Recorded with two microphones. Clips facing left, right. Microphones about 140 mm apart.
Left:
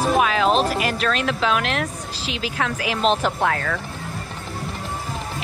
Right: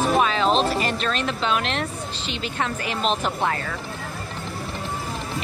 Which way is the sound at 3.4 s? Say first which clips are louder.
Left 3 dB; 75° left (ahead or behind).